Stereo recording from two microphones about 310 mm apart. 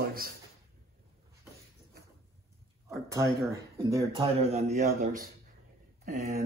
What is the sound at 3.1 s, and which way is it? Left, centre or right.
Speech, centre.